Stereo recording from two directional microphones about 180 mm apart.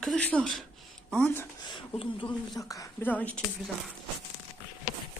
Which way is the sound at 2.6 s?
20° left (ahead or behind).